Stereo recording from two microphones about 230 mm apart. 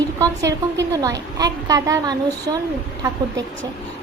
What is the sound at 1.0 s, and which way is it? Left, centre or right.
A woman's voice, centre.